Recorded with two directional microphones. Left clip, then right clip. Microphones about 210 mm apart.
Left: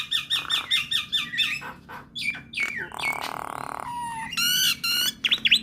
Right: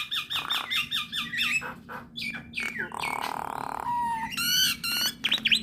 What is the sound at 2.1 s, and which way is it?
Bird, 25° left (ahead or behind).